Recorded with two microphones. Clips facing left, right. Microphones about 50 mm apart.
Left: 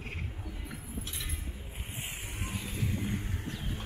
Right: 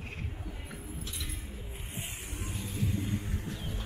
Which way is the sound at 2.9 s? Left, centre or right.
Left.